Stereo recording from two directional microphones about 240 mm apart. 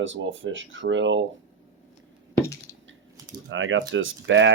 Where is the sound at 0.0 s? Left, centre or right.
Right.